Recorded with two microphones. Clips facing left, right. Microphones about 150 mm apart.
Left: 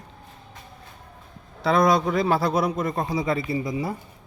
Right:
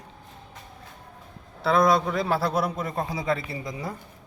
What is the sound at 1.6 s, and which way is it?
Speech, centre (ahead or behind).